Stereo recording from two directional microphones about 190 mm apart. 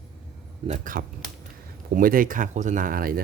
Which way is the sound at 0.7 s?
40° right (ahead or behind).